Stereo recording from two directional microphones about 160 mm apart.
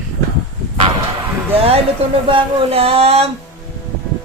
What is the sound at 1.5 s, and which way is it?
Music, 35° right (ahead or behind).